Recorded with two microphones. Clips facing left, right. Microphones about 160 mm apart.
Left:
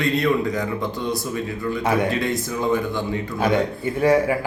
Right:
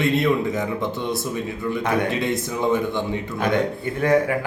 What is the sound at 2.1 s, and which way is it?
Speech, 20° right (ahead or behind).